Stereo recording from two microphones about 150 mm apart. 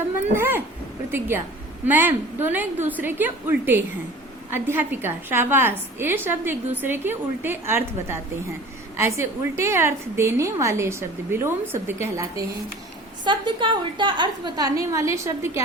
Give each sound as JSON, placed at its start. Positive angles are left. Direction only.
{"t": 0.3, "sound": "speech", "side_deg": -15}
{"t": 1.9, "sound": "a woman's voice", "side_deg": -15}
{"t": 13.2, "sound": "a woman's voice", "side_deg": -30}